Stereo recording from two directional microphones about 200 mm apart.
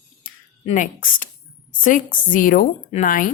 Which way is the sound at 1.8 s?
40° left (ahead or behind).